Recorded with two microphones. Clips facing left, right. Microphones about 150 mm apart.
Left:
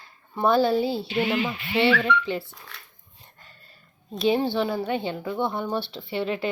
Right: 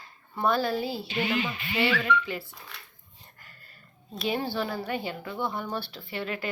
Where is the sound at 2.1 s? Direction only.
75° left (ahead or behind).